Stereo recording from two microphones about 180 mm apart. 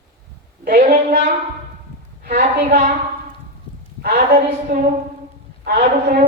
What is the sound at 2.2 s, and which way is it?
Speech, 50° right (ahead or behind).